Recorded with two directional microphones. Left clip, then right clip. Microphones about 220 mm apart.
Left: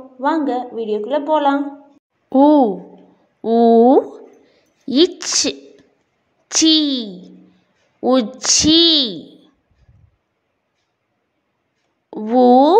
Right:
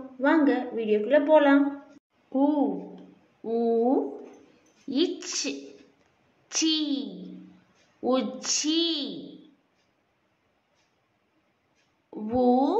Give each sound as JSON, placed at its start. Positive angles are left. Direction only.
{"t": 0.2, "sound": "speech", "side_deg": 20}
{"t": 2.2, "sound": "a woman's voice", "side_deg": 45}
{"t": 12.1, "sound": "a woman's voice", "side_deg": 35}